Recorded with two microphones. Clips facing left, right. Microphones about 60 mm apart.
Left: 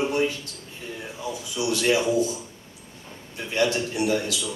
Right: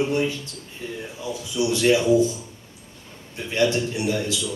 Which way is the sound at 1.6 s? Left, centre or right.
Right.